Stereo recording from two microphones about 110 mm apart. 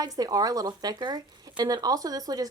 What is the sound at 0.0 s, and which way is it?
Speech, 35° right (ahead or behind).